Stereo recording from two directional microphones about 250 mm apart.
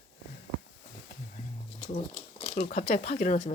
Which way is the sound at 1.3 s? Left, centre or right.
Left.